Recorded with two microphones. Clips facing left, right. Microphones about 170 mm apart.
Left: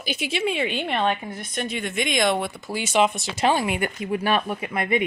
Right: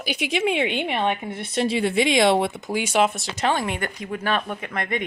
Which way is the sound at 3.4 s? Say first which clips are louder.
Left 2 dB; 10° left (ahead or behind).